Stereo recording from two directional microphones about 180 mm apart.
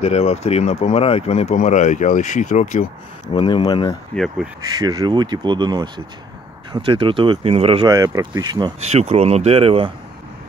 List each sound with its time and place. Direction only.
0.0 s speech: 35° left (ahead or behind)
3.3 s speech: 25° left (ahead or behind)
4.1 s speech: centre (ahead or behind)
4.7 s speech: 20° right (ahead or behind)
7.9 s speech: 20° right (ahead or behind)
8.9 s speech: 35° right (ahead or behind)